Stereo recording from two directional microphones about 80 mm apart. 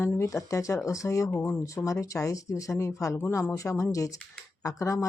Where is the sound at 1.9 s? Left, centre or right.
Left.